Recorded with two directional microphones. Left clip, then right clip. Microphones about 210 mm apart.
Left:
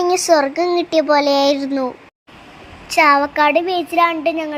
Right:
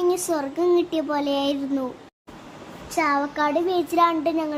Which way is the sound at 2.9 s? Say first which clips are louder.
Left 10 dB; 30° left (ahead or behind).